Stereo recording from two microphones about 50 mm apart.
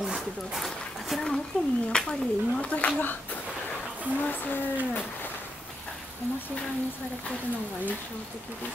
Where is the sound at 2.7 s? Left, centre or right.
Left.